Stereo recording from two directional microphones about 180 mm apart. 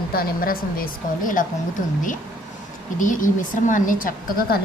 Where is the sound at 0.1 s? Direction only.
55° left (ahead or behind).